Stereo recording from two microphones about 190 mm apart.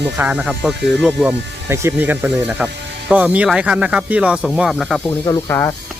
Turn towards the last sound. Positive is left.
turn(degrees=15)  # may be behind; listen again after turning